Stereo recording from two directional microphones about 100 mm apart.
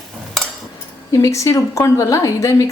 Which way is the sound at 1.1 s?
35° left (ahead or behind).